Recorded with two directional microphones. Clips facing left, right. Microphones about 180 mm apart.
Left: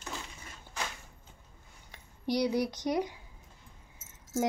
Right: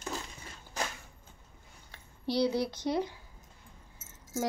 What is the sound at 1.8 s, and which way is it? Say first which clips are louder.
Speech: left 2 dB; 15° left (ahead or behind).